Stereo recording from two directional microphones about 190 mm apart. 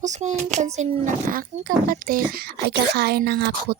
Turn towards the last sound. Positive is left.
turn(degrees=-55)  # may be behind; listen again after turning